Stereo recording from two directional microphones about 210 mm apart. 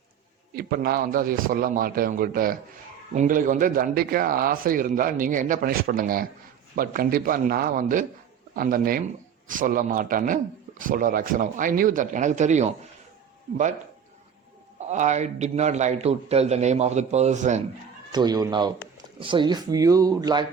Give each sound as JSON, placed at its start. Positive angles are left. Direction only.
{"t": 0.5, "sound": "a man's voice", "side_deg": -45}
{"t": 14.8, "sound": "a man's voice", "side_deg": -35}
{"t": 18.1, "sound": "speech", "side_deg": -20}